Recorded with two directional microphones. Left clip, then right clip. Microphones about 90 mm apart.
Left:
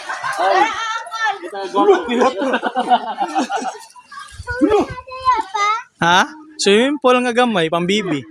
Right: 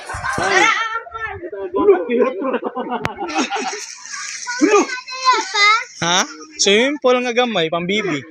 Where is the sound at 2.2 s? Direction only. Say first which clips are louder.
Left 3 dB; 50° left (ahead or behind).